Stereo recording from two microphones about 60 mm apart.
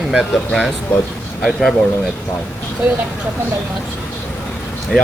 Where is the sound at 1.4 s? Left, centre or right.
Centre.